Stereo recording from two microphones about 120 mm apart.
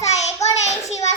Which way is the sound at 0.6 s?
65° left (ahead or behind).